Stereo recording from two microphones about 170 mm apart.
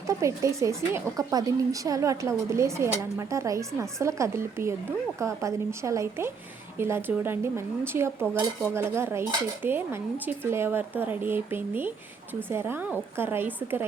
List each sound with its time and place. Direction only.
0.1 s speech: 15° right (ahead or behind)